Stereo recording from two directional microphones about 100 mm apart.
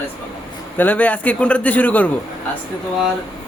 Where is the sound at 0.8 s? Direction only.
15° left (ahead or behind).